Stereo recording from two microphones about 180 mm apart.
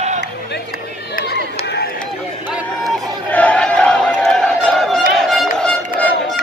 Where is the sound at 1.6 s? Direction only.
70° left (ahead or behind).